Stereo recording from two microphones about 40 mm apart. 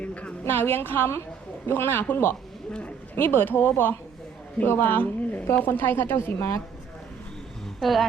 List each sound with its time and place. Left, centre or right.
0.0 s a sound: left
0.4 s speech: left
1.6 s speech: left
3.2 s speech: left
4.9 s a woman's voice: left
5.6 s speech: left
7.8 s speech: centre